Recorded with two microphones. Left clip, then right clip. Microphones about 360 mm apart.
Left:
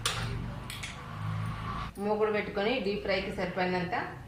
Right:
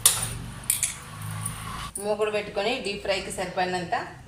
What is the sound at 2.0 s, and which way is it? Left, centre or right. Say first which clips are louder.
Speech: right 3 dB; right.